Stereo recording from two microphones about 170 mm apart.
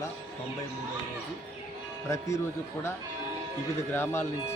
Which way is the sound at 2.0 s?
20° left (ahead or behind).